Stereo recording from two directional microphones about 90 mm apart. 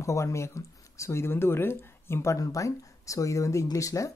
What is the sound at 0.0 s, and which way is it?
A woman's voice, 35° left (ahead or behind).